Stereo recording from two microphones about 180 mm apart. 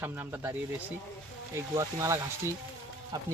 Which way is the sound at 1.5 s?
15° right (ahead or behind).